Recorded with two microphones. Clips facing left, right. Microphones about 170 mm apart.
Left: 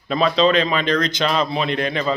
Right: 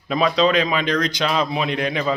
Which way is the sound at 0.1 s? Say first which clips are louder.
Left 1 dB; 10° right (ahead or behind).